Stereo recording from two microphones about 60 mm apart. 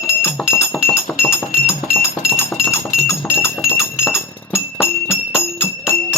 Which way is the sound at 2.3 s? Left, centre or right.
Left.